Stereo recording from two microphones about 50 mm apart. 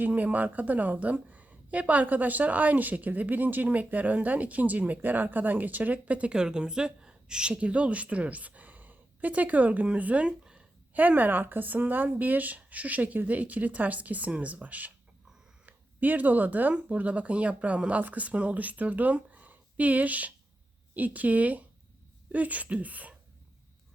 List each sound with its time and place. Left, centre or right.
0.0 s speech: right
6.3 s a woman's voice: centre; by 23.1 s right